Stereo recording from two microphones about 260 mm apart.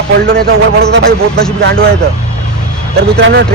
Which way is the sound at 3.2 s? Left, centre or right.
Right.